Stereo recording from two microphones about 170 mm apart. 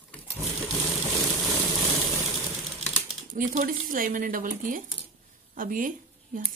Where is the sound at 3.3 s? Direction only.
50° right (ahead or behind).